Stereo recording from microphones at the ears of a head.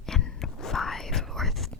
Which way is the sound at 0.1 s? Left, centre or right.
Left.